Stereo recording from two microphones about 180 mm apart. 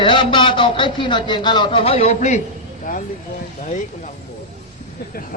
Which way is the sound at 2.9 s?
50° left (ahead or behind).